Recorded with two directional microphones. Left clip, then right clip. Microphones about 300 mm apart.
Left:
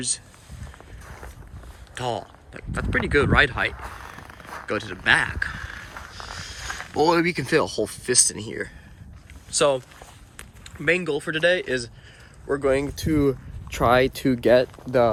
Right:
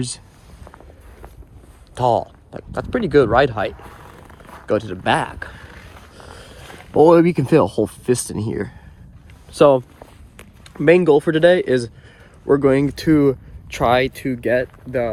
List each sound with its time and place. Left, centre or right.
2.0 s speech: centre
13.1 s speech: centre